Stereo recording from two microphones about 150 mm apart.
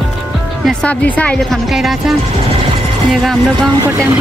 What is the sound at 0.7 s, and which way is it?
Speech, 5° left (ahead or behind).